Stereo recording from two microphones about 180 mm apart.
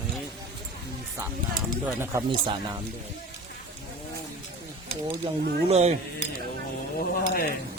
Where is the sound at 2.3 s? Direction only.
30° right (ahead or behind).